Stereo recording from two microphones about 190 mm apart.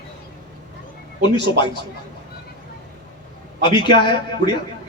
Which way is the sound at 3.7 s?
25° left (ahead or behind).